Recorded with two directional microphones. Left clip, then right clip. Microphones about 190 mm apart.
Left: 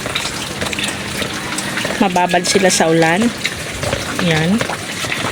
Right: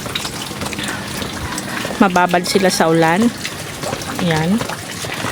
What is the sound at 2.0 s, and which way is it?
Speech, 10° right (ahead or behind).